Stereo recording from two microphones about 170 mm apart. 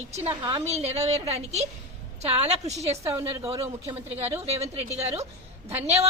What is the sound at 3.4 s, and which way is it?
Speech, 15° right (ahead or behind).